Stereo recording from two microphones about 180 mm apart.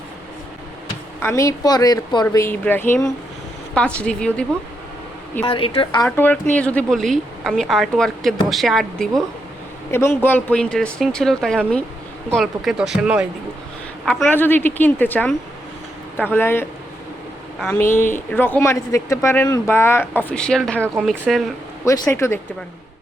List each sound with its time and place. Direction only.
1.2 s a woman's voice: 15° left (ahead or behind)
5.5 s a woman's voice: 30° left (ahead or behind)
6.1 s a woman's voice: 10° left (ahead or behind)
9.9 s a woman's voice: 15° left (ahead or behind)
17.9 s a woman's voice: 10° left (ahead or behind)
22.1 s speech: 15° left (ahead or behind)